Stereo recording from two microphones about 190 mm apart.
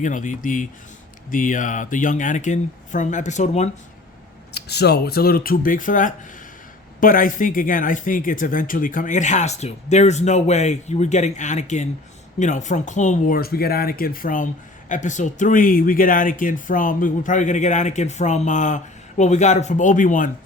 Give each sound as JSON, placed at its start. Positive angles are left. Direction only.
{"t": 0.0, "sound": "speech", "side_deg": 40}
{"t": 4.5, "sound": "speech", "side_deg": 60}